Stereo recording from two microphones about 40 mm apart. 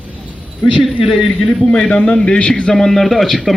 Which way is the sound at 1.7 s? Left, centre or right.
Left.